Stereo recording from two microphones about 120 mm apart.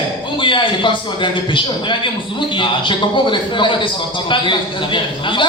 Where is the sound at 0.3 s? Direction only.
45° left (ahead or behind).